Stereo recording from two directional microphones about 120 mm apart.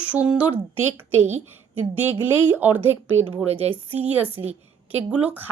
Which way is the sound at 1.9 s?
15° right (ahead or behind).